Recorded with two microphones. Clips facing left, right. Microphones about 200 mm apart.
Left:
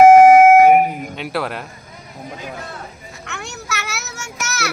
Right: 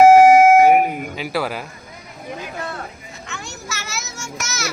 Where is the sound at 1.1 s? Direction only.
Centre (ahead or behind).